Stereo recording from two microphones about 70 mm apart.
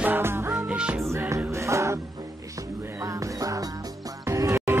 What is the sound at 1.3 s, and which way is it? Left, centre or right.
Music, right.